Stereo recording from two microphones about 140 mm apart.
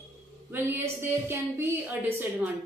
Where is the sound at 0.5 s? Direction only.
15° right (ahead or behind).